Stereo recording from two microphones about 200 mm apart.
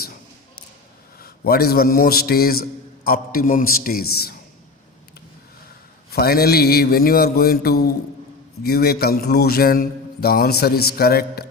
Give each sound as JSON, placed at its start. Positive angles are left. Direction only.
{"t": 1.2, "sound": "a man's voice", "side_deg": 50}
{"t": 6.1, "sound": "a man's voice", "side_deg": 50}